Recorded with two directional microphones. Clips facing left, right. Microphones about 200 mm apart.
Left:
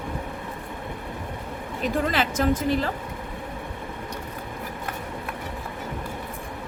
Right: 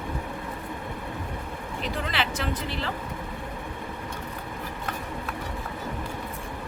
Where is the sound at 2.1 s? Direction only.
45° left (ahead or behind).